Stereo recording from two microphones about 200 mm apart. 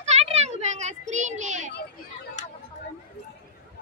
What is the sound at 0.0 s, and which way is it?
Children playing, 35° right (ahead or behind).